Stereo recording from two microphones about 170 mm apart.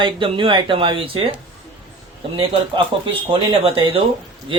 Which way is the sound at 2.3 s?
35° right (ahead or behind).